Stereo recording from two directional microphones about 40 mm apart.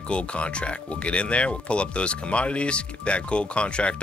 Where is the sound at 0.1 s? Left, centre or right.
Left.